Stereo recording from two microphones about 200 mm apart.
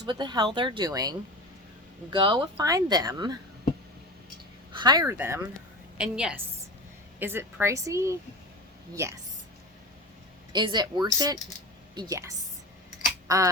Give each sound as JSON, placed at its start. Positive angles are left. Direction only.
{"t": 0.0, "sound": "speech", "side_deg": -20}
{"t": 2.1, "sound": "speech", "side_deg": -25}
{"t": 4.7, "sound": "a woman's voice", "side_deg": -20}
{"t": 10.5, "sound": "speech", "side_deg": -20}
{"t": 13.2, "sound": "a sound", "side_deg": -15}